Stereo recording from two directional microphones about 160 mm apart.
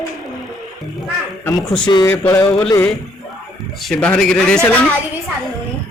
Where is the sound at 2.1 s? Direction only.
15° left (ahead or behind).